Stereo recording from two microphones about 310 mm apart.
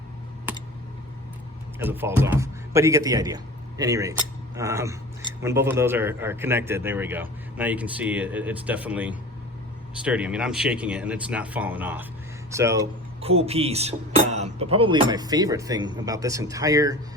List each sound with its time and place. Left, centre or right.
1.8 s a man's voice: centre